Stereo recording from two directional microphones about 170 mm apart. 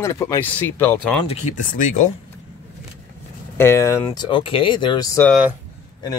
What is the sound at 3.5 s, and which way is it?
Speech, 15° left (ahead or behind).